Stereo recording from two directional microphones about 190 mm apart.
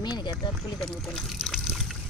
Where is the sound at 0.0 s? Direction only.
25° left (ahead or behind).